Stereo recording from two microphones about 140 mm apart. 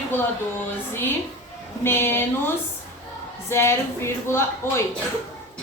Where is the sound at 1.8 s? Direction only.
15° left (ahead or behind).